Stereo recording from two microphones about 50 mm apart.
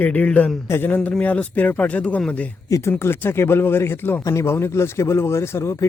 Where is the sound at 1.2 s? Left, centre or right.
Left.